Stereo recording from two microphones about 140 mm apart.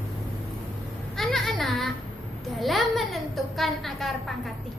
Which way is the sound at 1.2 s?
Centre (ahead or behind).